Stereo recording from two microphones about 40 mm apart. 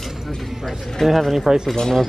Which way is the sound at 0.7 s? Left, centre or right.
Centre.